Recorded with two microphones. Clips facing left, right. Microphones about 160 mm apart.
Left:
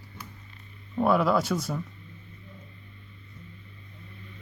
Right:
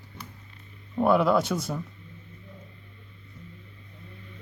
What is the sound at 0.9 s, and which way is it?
Speech, centre (ahead or behind).